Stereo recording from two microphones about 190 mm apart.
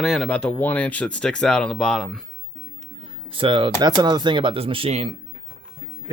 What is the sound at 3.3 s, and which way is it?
Speech, 25° right (ahead or behind).